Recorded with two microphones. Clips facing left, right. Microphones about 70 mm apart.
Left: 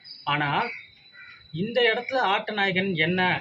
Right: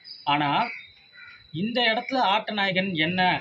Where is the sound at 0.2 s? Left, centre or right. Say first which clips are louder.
Right 2 dB; left.